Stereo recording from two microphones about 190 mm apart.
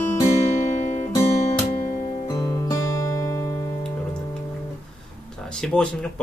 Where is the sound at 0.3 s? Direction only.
40° left (ahead or behind).